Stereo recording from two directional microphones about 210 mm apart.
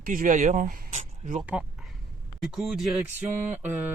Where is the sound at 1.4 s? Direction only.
5° right (ahead or behind).